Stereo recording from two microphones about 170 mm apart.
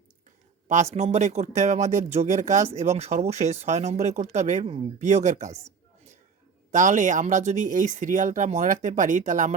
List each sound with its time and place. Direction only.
0.7 s speech: 40° right (ahead or behind)
6.7 s speech: 45° right (ahead or behind)